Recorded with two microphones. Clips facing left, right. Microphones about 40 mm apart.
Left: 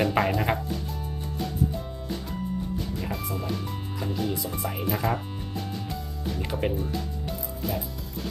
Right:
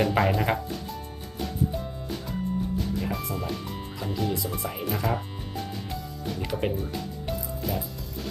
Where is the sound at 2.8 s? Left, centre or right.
Centre.